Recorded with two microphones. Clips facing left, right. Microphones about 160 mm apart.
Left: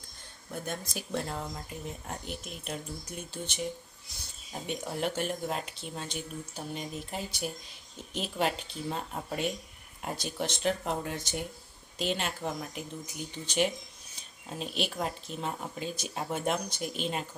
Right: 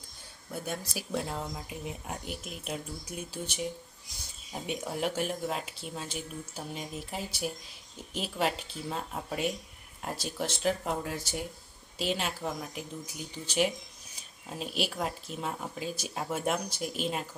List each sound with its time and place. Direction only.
0.5 s speech: 5° right (ahead or behind)